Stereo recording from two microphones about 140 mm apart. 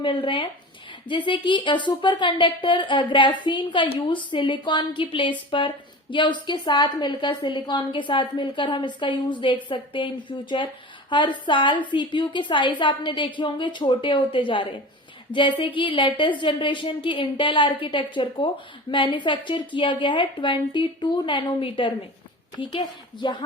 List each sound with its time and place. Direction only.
0.0 s speech: 40° left (ahead or behind)